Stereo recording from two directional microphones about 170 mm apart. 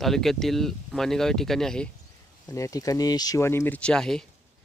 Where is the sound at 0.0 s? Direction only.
Centre (ahead or behind).